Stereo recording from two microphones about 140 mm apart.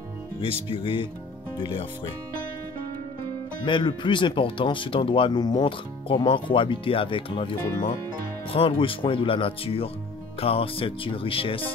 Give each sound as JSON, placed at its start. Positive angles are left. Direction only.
{"t": 0.4, "sound": "speech", "side_deg": 40}
{"t": 3.6, "sound": "speech", "side_deg": 35}